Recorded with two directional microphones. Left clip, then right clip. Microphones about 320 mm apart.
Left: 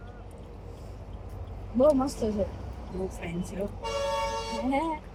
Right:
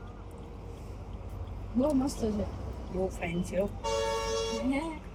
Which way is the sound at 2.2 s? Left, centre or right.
Centre.